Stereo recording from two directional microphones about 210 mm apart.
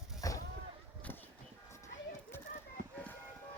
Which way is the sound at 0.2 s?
15° left (ahead or behind).